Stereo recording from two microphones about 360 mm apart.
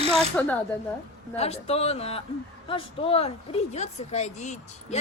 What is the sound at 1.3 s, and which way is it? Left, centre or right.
Speech, centre.